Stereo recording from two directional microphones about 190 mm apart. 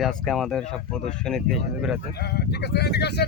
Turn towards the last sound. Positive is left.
turn(degrees=60)  # may be behind; listen again after turning